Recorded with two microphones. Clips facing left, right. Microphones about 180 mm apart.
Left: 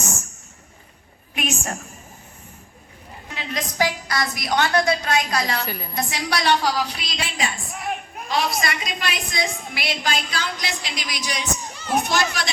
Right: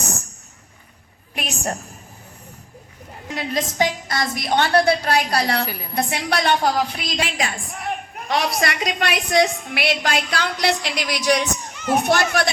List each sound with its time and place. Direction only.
1.4 s a woman's voice: 35° right (ahead or behind)
3.3 s a woman's voice: 30° right (ahead or behind)
5.6 s a woman's voice: 5° right (ahead or behind)
5.9 s a woman's voice: 60° right (ahead or behind)
8.3 s a woman's voice: 70° right (ahead or behind)